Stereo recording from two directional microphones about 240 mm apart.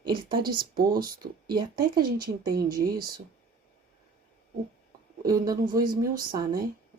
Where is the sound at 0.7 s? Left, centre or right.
Right.